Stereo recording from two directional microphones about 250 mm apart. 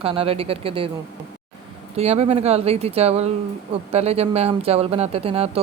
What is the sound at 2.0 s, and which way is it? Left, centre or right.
Speech, right.